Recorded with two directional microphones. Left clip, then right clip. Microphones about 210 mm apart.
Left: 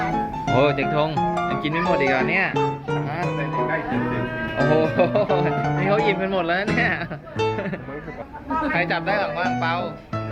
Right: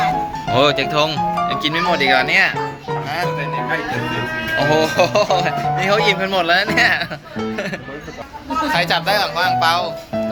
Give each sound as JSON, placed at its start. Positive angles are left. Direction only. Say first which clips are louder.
{"t": 0.5, "sound": "speech", "louder": "right 4 dB", "side_deg": 0}
{"t": 4.5, "sound": "speech", "louder": "right 4 dB", "side_deg": 0}
{"t": 8.7, "sound": "speech", "louder": "right 7 dB", "side_deg": -15}